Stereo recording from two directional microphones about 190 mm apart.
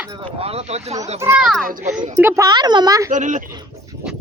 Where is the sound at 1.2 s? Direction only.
5° right (ahead or behind).